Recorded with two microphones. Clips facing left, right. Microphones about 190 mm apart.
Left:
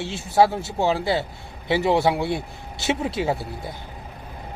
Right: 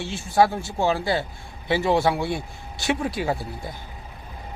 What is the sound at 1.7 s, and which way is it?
Speech, 20° left (ahead or behind).